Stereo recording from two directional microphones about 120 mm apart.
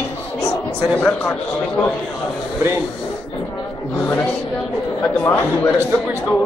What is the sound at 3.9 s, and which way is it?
A man's voice, 15° left (ahead or behind).